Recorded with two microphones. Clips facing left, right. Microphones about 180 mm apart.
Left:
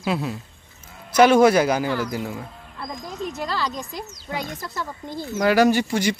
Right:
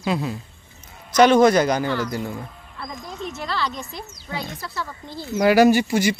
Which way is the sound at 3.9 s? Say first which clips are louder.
Left 2 dB; 15° left (ahead or behind).